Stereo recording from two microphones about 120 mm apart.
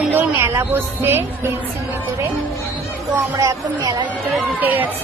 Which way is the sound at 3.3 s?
30° right (ahead or behind).